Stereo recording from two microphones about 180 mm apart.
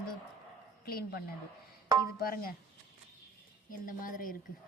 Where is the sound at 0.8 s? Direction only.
55° left (ahead or behind).